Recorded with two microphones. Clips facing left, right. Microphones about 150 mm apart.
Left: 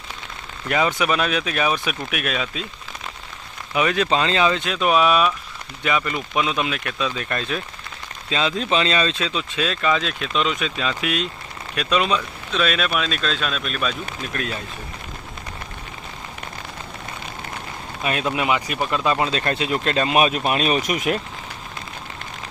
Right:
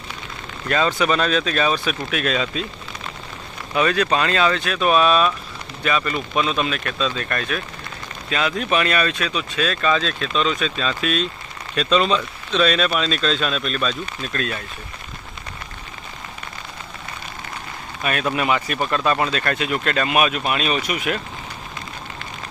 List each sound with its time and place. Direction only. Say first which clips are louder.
0.7 s speech: right 1 dB; 15° left (ahead or behind)
3.8 s speech: right 1 dB; 20° left (ahead or behind)
18.0 s speech: right 1 dB; 20° left (ahead or behind); by 21.2 s 45° left (ahead or behind)